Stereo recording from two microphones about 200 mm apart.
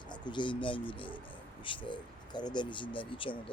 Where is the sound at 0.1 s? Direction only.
25° left (ahead or behind).